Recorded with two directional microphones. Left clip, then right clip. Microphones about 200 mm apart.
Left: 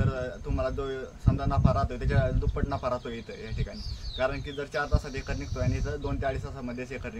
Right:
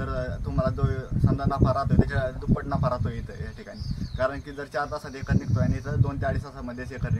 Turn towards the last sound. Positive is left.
turn(degrees=15)  # may be behind; listen again after turning